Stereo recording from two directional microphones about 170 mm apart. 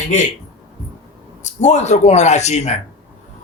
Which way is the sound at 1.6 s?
40° left (ahead or behind).